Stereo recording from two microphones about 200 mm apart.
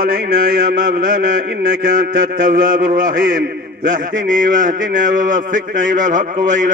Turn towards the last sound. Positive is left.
turn(degrees=-40)  # may be behind; listen again after turning